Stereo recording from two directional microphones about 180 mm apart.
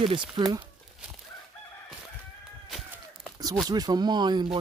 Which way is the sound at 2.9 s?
5° right (ahead or behind).